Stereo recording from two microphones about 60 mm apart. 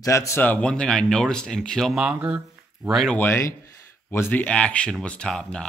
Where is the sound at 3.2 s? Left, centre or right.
Left.